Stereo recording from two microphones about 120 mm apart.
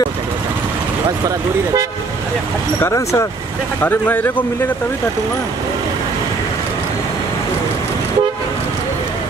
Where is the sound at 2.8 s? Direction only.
25° left (ahead or behind).